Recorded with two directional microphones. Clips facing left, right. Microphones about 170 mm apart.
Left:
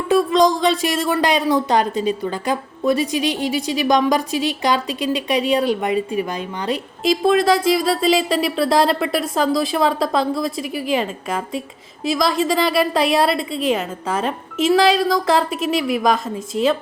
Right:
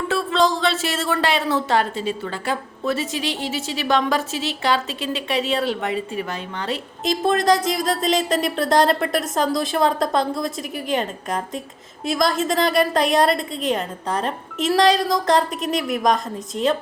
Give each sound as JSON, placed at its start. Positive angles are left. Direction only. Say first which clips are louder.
{"t": 0.1, "sound": "speech", "louder": "left 6 dB", "side_deg": 15}
{"t": 7.4, "sound": "a woman's voice", "louder": "left 3 dB", "side_deg": 5}